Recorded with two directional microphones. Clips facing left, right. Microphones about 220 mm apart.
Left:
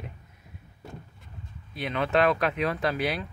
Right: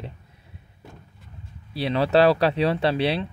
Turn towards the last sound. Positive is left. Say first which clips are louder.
# right 5 dB
turn(degrees=-30)  # may be behind; listen again after turning